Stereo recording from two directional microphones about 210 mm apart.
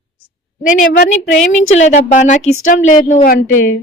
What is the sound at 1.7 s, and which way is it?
Speech, 35° left (ahead or behind).